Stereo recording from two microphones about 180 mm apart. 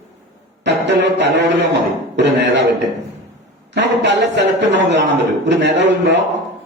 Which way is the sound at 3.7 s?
75° right (ahead or behind).